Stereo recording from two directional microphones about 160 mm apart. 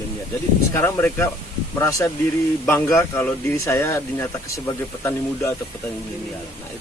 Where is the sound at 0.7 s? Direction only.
15° left (ahead or behind).